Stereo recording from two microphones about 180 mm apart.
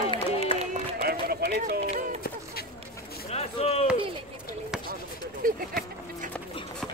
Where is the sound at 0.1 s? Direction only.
35° left (ahead or behind).